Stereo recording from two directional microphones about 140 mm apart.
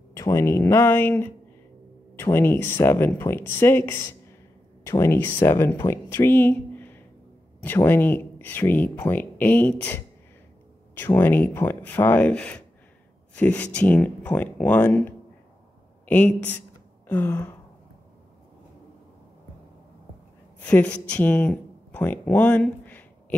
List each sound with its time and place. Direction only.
0.1 s speech: 20° left (ahead or behind)
20.6 s speech: 10° left (ahead or behind)